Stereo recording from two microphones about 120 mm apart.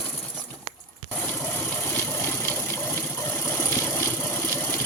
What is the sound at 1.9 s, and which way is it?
Engine, 20° left (ahead or behind).